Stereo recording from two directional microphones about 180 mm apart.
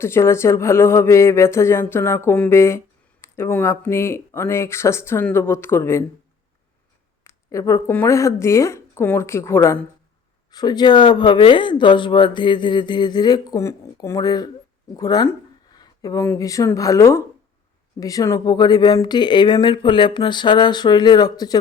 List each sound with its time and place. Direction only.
0.0 s speech: 15° left (ahead or behind)
7.3 s speech: 15° left (ahead or behind)